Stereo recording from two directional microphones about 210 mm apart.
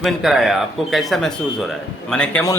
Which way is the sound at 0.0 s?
Centre (ahead or behind).